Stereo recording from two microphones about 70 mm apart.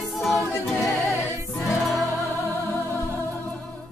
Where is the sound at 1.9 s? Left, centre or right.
Left.